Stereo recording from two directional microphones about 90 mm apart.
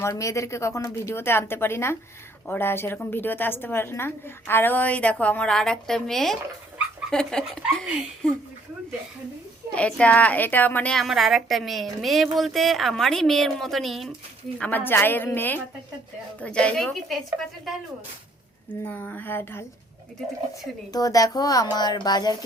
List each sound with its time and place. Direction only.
0.0 s a woman's voice: 35° left (ahead or behind); by 8.4 s 10° left (ahead or behind)
9.7 s a woman's voice: 15° left (ahead or behind)
10.9 s a woman's voice: centre (ahead or behind)
14.6 s a woman's voice: 20° left (ahead or behind); by 17.2 s 5° left (ahead or behind)
18.9 s a woman's voice: 20° left (ahead or behind)
20.9 s speech: 40° left (ahead or behind)